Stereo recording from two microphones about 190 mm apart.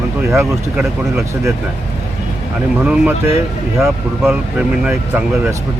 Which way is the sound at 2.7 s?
5° right (ahead or behind).